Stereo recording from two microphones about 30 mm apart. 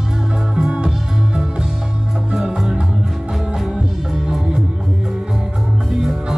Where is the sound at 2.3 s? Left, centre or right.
Right.